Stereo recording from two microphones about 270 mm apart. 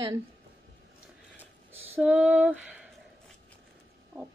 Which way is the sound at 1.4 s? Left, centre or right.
Centre.